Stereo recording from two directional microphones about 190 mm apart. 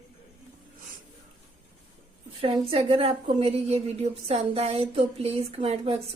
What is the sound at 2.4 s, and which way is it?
A woman's voice, 30° right (ahead or behind).